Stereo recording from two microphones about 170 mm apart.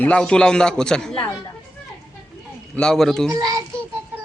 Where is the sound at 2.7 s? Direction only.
5° left (ahead or behind).